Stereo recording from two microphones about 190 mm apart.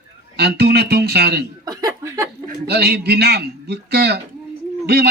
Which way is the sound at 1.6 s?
20° right (ahead or behind).